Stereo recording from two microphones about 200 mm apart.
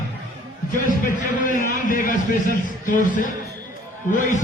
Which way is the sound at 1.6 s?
40° left (ahead or behind).